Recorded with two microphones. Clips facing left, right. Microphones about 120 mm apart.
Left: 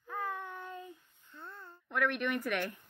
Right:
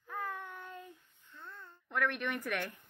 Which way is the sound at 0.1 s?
15° left (ahead or behind).